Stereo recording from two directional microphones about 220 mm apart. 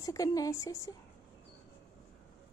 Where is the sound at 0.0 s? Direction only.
15° left (ahead or behind).